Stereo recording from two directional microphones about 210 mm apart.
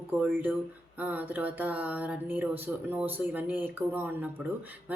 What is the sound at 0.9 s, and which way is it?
Speech, 5° right (ahead or behind).